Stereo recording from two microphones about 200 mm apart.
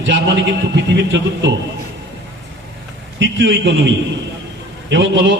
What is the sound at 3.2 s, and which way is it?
Speech, 65° right (ahead or behind).